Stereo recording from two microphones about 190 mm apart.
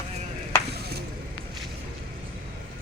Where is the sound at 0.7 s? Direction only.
55° right (ahead or behind).